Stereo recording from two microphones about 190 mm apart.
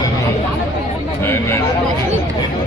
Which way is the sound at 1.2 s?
15° left (ahead or behind).